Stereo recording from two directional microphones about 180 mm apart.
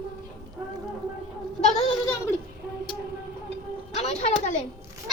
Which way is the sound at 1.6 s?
35° left (ahead or behind).